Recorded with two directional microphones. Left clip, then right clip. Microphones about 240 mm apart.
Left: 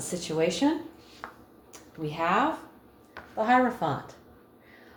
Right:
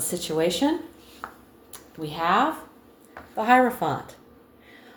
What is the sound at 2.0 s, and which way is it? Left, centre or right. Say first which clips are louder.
Speech: right 3 dB; right.